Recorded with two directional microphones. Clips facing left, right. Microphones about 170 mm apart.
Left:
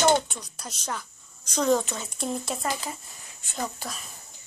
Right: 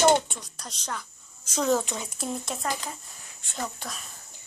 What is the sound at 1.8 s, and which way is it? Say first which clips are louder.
Speech: even; 15° right (ahead or behind).